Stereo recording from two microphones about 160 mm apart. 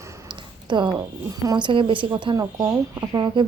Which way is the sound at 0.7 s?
30° right (ahead or behind).